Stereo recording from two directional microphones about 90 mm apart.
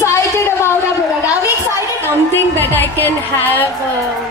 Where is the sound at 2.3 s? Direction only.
20° left (ahead or behind).